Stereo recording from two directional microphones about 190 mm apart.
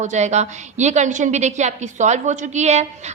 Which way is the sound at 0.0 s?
40° right (ahead or behind).